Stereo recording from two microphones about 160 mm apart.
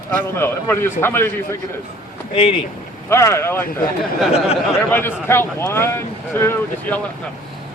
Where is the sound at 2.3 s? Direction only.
35° left (ahead or behind).